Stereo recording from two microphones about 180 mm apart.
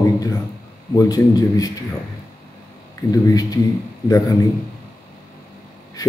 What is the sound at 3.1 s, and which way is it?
A man's voice, 20° left (ahead or behind).